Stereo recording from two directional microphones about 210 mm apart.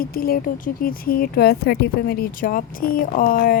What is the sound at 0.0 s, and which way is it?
Speech, 45° left (ahead or behind).